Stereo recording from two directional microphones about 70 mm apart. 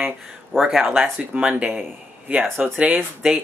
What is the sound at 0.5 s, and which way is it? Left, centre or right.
Speech, centre.